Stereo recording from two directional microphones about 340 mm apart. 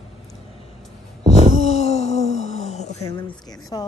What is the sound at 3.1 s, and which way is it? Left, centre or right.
Speech, centre.